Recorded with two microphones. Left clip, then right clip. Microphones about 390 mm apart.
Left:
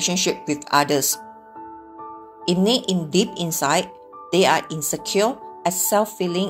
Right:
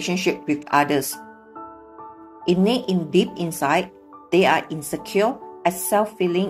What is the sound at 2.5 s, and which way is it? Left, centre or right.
Speech, centre.